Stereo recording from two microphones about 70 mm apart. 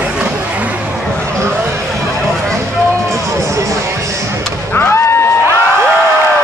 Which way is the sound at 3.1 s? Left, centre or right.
Right.